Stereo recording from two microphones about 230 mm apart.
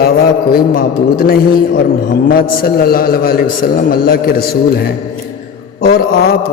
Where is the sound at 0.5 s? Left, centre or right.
Left.